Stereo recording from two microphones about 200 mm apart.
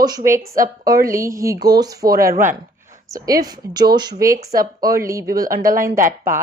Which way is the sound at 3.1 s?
20° right (ahead or behind).